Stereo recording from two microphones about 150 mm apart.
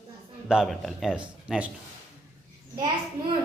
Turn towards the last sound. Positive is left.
turn(degrees=-30)  # may be behind; listen again after turning